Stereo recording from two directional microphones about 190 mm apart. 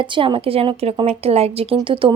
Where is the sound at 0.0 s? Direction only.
25° right (ahead or behind).